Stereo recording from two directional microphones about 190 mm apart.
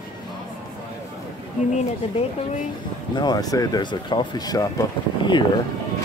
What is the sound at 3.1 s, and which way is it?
Speech, 20° left (ahead or behind).